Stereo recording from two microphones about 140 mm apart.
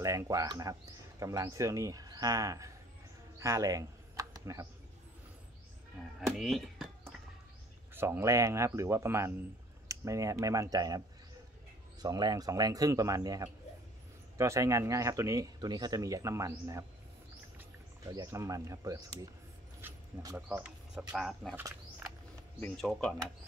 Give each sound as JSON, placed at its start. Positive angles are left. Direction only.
{"t": 0.0, "sound": "speech", "side_deg": -20}
{"t": 3.3, "sound": "a sound", "side_deg": -20}
{"t": 6.1, "sound": "a sound", "side_deg": 0}
{"t": 7.9, "sound": "speech", "side_deg": -15}
{"t": 12.0, "sound": "speech", "side_deg": -30}
{"t": 18.0, "sound": "speech", "side_deg": -25}
{"t": 19.8, "sound": "a sound", "side_deg": -15}
{"t": 20.3, "sound": "speech", "side_deg": -10}
{"t": 22.8, "sound": "speech", "side_deg": 5}